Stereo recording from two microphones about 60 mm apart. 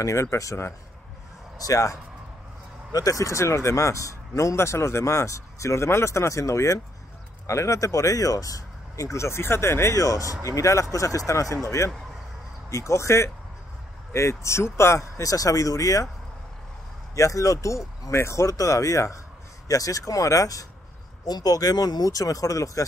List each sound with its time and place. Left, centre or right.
0.0 s speech: left
1.6 s speech: left
2.9 s speech: left
4.6 s speech: left
10.4 s speech: left
15.0 s speech: left
17.1 s speech: left
21.4 s speech: left